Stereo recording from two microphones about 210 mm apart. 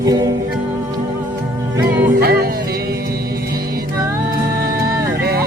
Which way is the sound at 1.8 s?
45° right (ahead or behind).